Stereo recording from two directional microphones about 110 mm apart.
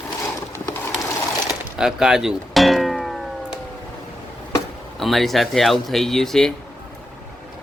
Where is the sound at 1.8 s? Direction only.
5° right (ahead or behind).